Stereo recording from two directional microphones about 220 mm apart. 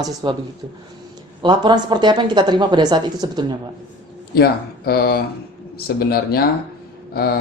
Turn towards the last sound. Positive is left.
turn(degrees=45)  # may be behind; listen again after turning